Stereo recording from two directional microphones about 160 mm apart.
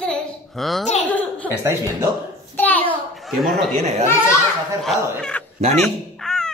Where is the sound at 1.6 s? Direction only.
15° right (ahead or behind).